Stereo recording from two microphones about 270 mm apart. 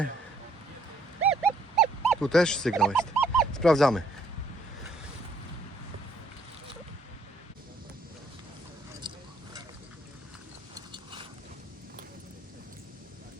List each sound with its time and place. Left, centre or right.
1.2 s wild animals: centre
9.0 s a sound: centre
10.8 s mechanisms: centre